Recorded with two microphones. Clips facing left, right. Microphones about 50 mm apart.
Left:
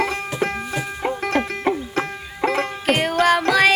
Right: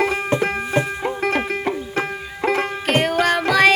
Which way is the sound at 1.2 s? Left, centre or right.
Centre.